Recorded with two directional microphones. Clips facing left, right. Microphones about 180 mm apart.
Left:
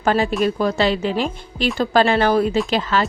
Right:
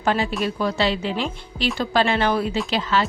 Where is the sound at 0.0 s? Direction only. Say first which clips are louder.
Left 4 dB; 45° left (ahead or behind).